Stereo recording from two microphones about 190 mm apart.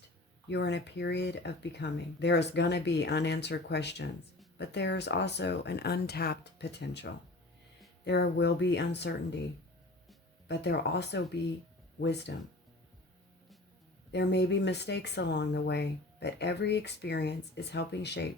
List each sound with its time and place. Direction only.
0.4 s speech: 65° left (ahead or behind)
10.5 s speech: 65° left (ahead or behind)
14.1 s speech: 65° left (ahead or behind)